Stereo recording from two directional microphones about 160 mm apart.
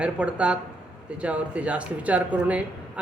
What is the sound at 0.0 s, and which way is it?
Speech, 5° right (ahead or behind).